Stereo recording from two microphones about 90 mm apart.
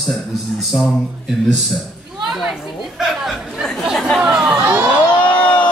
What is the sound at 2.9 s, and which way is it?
Chatter, centre (ahead or behind).